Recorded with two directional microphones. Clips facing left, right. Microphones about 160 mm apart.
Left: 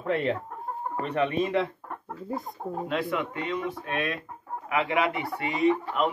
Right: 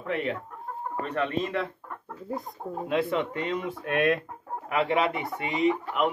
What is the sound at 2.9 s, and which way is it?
Speech, 20° right (ahead or behind).